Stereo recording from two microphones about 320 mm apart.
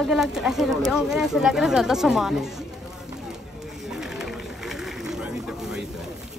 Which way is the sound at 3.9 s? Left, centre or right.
Centre.